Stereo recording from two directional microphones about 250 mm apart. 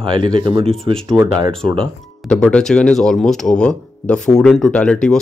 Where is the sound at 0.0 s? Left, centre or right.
Centre.